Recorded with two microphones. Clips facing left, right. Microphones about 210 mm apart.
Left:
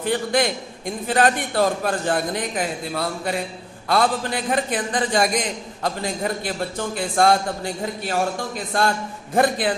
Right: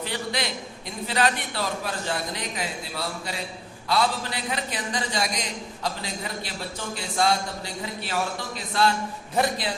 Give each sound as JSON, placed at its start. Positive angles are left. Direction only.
{"t": 0.0, "sound": "a man's voice", "side_deg": 50}